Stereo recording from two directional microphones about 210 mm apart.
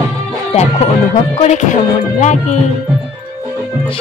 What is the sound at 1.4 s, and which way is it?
Music, 35° left (ahead or behind).